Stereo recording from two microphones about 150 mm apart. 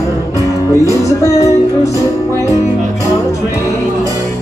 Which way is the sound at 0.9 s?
20° left (ahead or behind).